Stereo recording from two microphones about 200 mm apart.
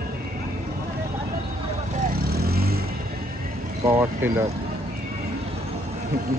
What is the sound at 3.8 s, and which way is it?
Speech, 15° right (ahead or behind).